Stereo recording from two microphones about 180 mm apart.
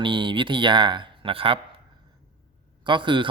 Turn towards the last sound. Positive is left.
turn(degrees=-25)  # may be behind; listen again after turning